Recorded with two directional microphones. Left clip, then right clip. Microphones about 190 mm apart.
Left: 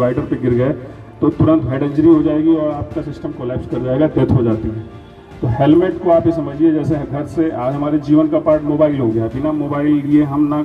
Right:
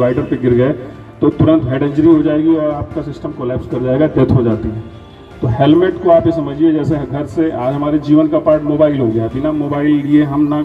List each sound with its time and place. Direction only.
0.0 s a man's voice: 30° right (ahead or behind)
5.6 s a man's voice: 30° right (ahead or behind)